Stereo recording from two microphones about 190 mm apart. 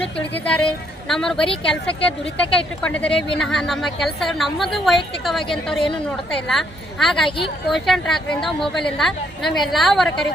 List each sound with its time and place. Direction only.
0.0 s a woman's voice: 5° left (ahead or behind)
7.3 s speech: 25° left (ahead or behind)
7.7 s a woman's voice: centre (ahead or behind)